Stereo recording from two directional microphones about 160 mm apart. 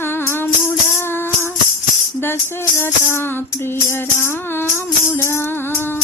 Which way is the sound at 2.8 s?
15° left (ahead or behind).